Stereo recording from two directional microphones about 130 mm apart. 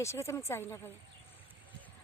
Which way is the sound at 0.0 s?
20° left (ahead or behind).